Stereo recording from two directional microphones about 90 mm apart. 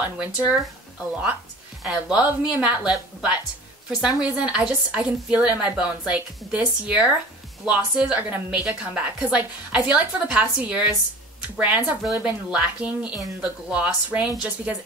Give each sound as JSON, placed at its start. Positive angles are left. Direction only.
{"t": 0.2, "sound": "a woman's voice", "side_deg": -15}
{"t": 1.8, "sound": "a woman's voice", "side_deg": -10}